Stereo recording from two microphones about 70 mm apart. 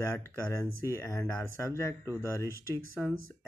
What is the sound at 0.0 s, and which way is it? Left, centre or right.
Speech, left.